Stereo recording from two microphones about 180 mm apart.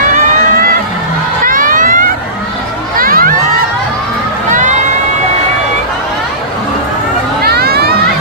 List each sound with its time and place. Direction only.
1.4 s crowd: 50° right (ahead or behind)
4.5 s crowd: 45° right (ahead or behind)
7.4 s a sound: 60° right (ahead or behind)